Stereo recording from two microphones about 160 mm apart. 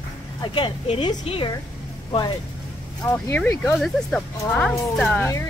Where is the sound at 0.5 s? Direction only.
35° left (ahead or behind).